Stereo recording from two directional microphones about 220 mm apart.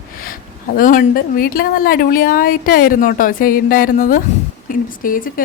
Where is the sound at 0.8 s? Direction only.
40° left (ahead or behind).